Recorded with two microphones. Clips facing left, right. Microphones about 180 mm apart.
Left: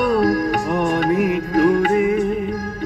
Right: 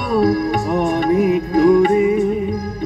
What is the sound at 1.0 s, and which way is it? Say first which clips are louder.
Music: right 3 dB; 25° right (ahead or behind).